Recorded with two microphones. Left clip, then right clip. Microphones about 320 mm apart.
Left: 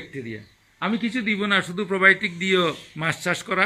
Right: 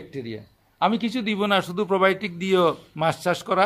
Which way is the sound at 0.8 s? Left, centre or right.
Right.